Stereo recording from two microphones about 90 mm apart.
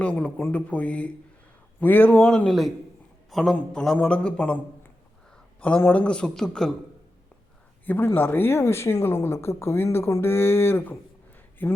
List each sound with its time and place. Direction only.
0.0 s a man's voice: 15° left (ahead or behind)
2.5 s a man's voice: centre (ahead or behind)
7.9 s speech: 20° left (ahead or behind)